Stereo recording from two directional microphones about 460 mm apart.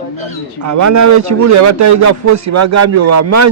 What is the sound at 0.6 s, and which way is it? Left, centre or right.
A man's voice, right.